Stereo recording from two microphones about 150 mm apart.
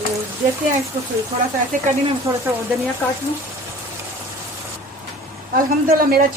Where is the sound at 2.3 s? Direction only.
25° right (ahead or behind).